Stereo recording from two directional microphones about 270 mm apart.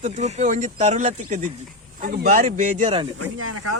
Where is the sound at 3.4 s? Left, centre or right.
Right.